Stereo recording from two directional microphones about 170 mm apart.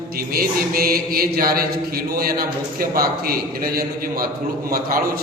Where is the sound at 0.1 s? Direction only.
60° right (ahead or behind).